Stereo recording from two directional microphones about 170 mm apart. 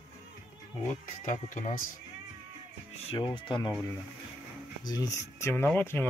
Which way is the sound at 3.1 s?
30° left (ahead or behind).